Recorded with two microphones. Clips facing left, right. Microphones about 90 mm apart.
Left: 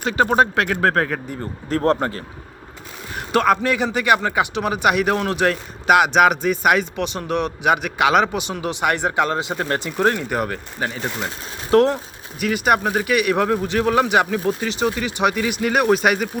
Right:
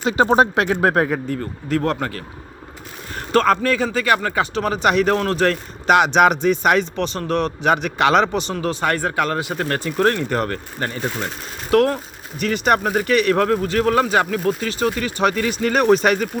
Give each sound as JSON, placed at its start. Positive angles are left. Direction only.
{"t": 0.0, "sound": "speech", "side_deg": -25}
{"t": 1.7, "sound": "speech", "side_deg": 35}
{"t": 3.2, "sound": "speech", "side_deg": 10}
{"t": 11.7, "sound": "speech", "side_deg": 25}
{"t": 12.4, "sound": "speech", "side_deg": 5}